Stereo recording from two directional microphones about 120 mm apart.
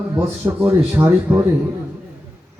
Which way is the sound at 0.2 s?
15° right (ahead or behind).